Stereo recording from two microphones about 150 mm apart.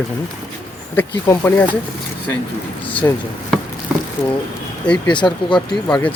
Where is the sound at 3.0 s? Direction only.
15° left (ahead or behind).